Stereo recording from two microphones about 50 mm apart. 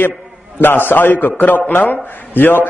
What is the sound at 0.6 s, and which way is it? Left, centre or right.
A man's voice, left.